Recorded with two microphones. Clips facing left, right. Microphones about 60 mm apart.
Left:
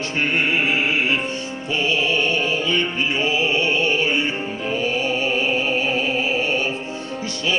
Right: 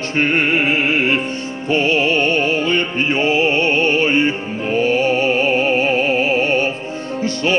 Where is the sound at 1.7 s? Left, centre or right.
Right.